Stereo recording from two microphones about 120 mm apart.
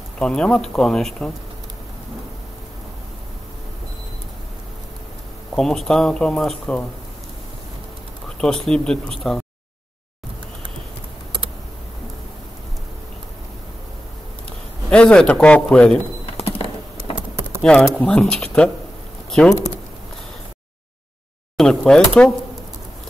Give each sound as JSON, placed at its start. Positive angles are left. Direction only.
{"t": 0.2, "sound": "speech", "side_deg": 5}
{"t": 5.5, "sound": "speech", "side_deg": 5}
{"t": 8.4, "sound": "speech", "side_deg": 5}
{"t": 14.9, "sound": "speech", "side_deg": 5}
{"t": 16.3, "sound": "a sound", "side_deg": 55}
{"t": 17.6, "sound": "speech", "side_deg": 5}
{"t": 21.5, "sound": "speech", "side_deg": 5}